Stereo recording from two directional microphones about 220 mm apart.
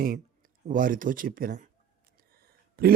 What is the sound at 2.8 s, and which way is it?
Speech, 40° right (ahead or behind).